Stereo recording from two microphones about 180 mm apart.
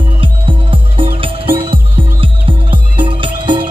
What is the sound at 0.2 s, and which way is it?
Music, 30° right (ahead or behind).